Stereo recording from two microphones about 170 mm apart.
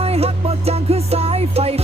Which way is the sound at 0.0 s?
35° right (ahead or behind).